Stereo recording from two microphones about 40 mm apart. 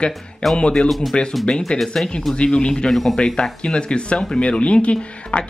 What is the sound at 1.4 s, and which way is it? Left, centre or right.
A woman's voice, left.